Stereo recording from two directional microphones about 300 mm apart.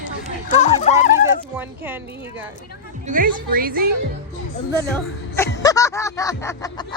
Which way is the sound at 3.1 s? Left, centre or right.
Right.